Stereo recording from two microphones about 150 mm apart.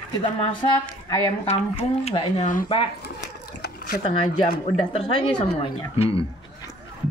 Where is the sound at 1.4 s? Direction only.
45° left (ahead or behind).